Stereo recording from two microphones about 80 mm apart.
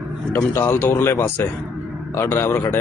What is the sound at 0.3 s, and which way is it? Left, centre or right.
A man's voice, left.